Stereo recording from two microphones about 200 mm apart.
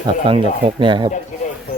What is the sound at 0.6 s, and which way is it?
Speech, 25° right (ahead or behind).